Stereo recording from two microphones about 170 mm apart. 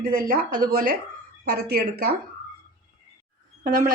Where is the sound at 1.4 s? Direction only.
70° right (ahead or behind).